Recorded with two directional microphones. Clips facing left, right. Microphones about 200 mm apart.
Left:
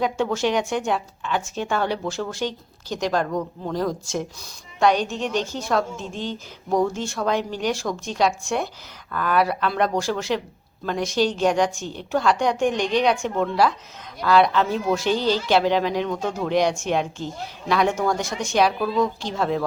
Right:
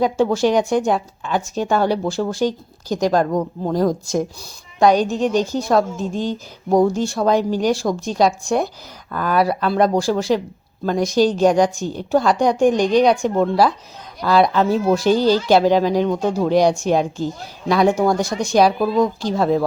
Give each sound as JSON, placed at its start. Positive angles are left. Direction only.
{"t": 0.0, "sound": "a woman's voice", "side_deg": -35}